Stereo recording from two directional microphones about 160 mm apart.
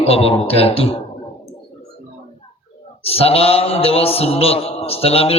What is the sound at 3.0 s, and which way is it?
A man's voice, 40° left (ahead or behind).